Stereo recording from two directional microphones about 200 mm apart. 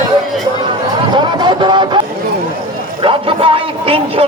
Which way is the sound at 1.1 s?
25° right (ahead or behind).